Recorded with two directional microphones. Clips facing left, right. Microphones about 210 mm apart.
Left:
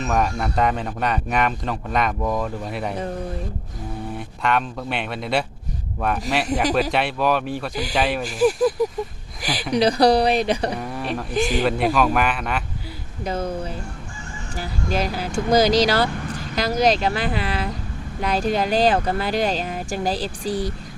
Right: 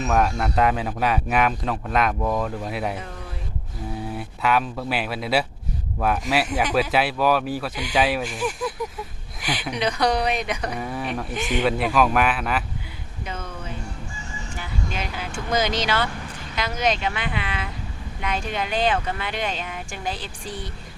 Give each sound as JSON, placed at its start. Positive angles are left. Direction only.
{"t": 0.0, "sound": "speech", "side_deg": 0}
{"t": 4.2, "sound": "speech", "side_deg": -5}
{"t": 8.2, "sound": "speech", "side_deg": 35}
{"t": 9.4, "sound": "a sound", "side_deg": 35}
{"t": 9.7, "sound": "speech", "side_deg": 35}
{"t": 10.8, "sound": "speech", "side_deg": 0}
{"t": 11.3, "sound": "speech", "side_deg": 35}
{"t": 11.6, "sound": "speech", "side_deg": 0}
{"t": 13.2, "sound": "a sound", "side_deg": 35}
{"t": 14.5, "sound": "speech", "side_deg": 35}